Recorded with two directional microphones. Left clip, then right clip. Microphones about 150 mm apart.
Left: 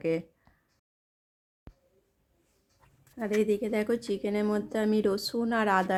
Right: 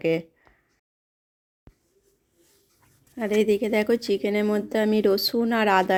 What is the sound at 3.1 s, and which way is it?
Speech, 30° right (ahead or behind).